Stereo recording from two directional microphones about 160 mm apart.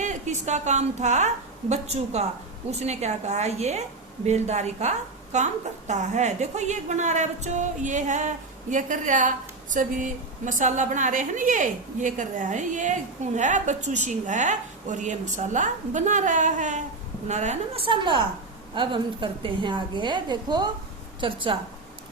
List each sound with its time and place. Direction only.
0.0 s a woman's voice: 50° right (ahead or behind)